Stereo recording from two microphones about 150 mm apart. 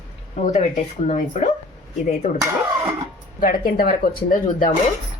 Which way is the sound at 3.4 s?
80° left.